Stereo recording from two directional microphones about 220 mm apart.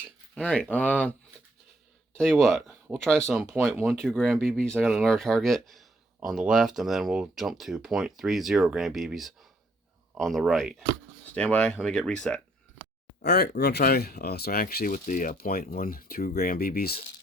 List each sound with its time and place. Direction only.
0.3 s speech: 5° left (ahead or behind)
2.1 s speech: centre (ahead or behind)
13.2 s speech: 45° left (ahead or behind)